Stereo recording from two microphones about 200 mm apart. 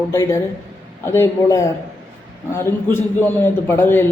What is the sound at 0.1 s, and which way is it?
A man's voice, 15° left (ahead or behind).